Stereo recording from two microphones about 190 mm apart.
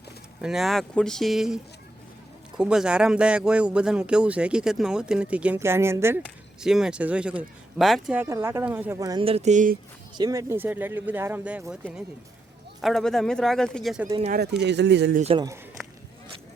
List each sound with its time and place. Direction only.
0.4 s speech: centre (ahead or behind)
6.2 s speech: 5° right (ahead or behind); by 9.2 s 20° right (ahead or behind)
9.2 s speech: 35° right (ahead or behind)
10.2 s speech: 20° right (ahead or behind); by 14.1 s centre (ahead or behind)
14.3 s speech: 60° right (ahead or behind)
15.2 s speech: 30° right (ahead or behind)